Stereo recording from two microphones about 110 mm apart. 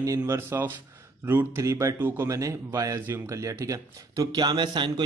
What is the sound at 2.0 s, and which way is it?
Speech, 15° right (ahead or behind).